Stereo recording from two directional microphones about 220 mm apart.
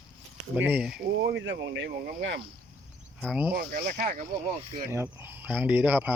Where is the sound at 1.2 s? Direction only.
55° right (ahead or behind).